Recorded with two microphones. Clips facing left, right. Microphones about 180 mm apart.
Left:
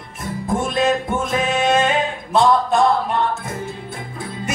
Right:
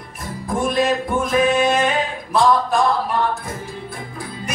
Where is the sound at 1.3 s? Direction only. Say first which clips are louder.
Right 3 dB; 25° left (ahead or behind).